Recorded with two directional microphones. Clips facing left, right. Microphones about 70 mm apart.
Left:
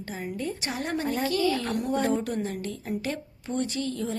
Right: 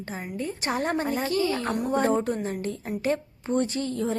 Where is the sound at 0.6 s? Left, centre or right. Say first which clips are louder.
Right 4 dB; right.